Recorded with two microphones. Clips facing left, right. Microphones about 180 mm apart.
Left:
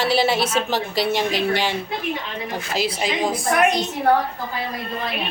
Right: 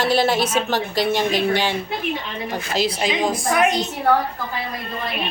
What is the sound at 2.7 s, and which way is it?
Speech, 5° left (ahead or behind).